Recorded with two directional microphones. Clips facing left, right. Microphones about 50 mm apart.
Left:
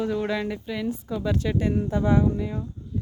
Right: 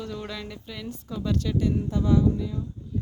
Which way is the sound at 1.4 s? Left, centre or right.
Left.